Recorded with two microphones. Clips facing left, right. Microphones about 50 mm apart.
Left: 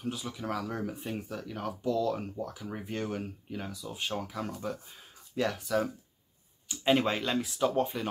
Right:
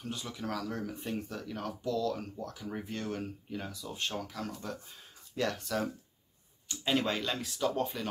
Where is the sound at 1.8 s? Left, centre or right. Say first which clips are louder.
Left 3 dB; left.